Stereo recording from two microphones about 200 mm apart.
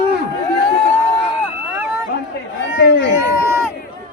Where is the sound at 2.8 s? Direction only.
55° left (ahead or behind).